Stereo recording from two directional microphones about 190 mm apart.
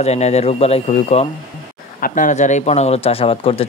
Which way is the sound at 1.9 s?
45° left (ahead or behind).